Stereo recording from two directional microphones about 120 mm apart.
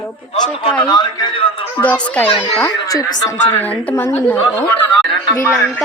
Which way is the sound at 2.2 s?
50° left (ahead or behind).